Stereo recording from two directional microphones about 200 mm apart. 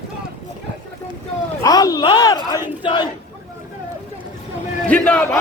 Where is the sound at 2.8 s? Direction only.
25° left (ahead or behind).